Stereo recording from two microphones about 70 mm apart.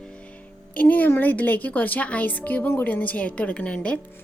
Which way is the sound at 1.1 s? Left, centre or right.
Left.